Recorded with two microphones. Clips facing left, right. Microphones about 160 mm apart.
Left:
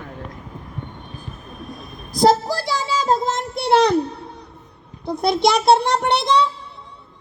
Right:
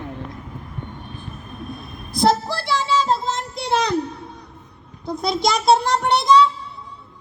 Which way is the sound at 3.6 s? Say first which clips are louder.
Left 7 dB; 60° left (ahead or behind).